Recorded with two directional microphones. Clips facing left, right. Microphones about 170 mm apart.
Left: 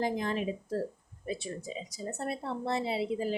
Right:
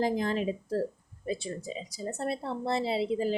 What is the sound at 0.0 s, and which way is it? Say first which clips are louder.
Speech: right 3 dB; 35° right (ahead or behind).